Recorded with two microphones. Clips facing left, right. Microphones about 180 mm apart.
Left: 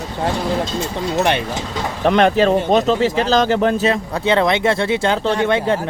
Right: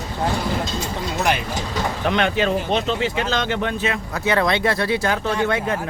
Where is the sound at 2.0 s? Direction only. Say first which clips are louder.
Left 7 dB; 40° left (ahead or behind).